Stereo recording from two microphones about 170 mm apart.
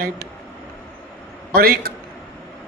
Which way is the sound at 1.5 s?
60° right (ahead or behind).